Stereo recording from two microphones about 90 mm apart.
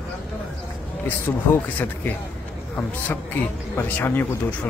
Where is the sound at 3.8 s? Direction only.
25° left (ahead or behind).